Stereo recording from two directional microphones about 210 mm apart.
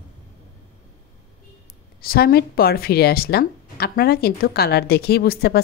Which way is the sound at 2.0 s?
45° left (ahead or behind).